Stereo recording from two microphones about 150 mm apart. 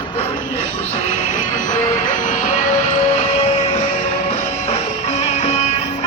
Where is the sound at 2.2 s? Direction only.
55° left (ahead or behind).